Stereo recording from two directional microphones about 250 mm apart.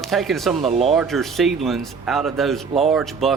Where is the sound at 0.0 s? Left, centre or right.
Centre.